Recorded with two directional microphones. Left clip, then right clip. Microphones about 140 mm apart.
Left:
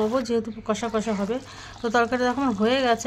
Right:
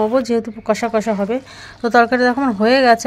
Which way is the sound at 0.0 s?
35° right (ahead or behind).